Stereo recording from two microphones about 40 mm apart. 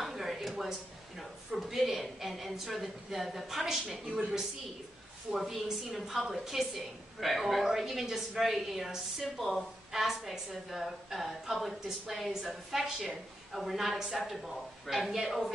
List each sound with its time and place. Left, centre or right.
0.0 s a sound: centre
0.7 s a woman's voice: centre
5.4 s a woman's voice: centre